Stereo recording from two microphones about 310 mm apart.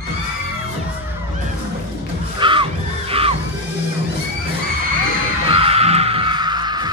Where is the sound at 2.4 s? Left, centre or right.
Centre.